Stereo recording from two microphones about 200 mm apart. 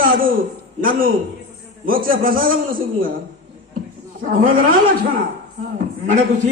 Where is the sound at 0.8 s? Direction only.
45° right (ahead or behind).